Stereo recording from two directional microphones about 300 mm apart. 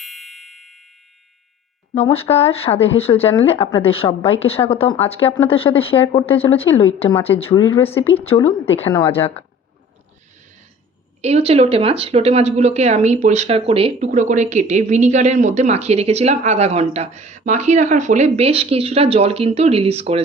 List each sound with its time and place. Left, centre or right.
0.0 s music: centre
2.0 s a woman's voice: centre
9.0 s speech: centre
11.2 s speech: right